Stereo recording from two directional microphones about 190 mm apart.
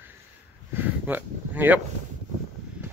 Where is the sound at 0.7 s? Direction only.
10° right (ahead or behind).